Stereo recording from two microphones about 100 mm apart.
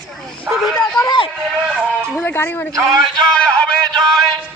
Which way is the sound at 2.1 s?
25° left (ahead or behind).